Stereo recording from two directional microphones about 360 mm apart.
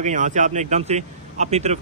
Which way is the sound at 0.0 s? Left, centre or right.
Centre.